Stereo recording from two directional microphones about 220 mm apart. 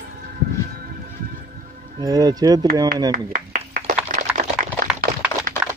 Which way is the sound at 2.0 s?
15° right (ahead or behind).